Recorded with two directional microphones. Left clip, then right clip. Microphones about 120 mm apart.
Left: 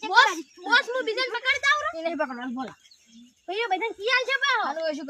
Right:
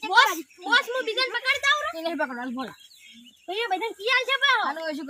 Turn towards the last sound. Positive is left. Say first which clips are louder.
# left 3 dB
turn(degrees=35)  # may be behind; listen again after turning